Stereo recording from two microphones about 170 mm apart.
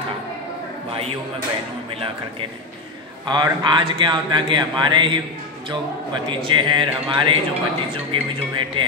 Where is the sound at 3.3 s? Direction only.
25° right (ahead or behind).